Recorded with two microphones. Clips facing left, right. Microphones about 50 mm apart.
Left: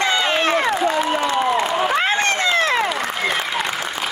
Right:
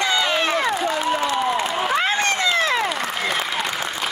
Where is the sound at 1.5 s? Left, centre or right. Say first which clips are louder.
Left 3 dB; centre.